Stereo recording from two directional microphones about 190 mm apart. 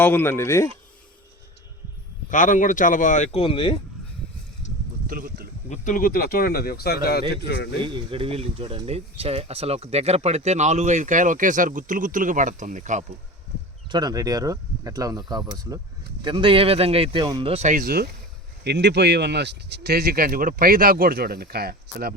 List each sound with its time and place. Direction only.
0.0 s speech: 10° left (ahead or behind)
2.3 s speech: 40° left (ahead or behind); by 3.8 s 25° left (ahead or behind)
5.0 s speech: 50° right (ahead or behind)
5.6 s a man's voice: 40° left (ahead or behind); by 7.8 s 60° left (ahead or behind)
7.8 s speech: 25° right (ahead or behind)
13.9 s speech: 20° right (ahead or behind); by 22.1 s 55° right (ahead or behind)